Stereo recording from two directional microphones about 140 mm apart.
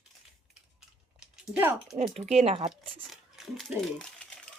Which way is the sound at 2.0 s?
50° right (ahead or behind).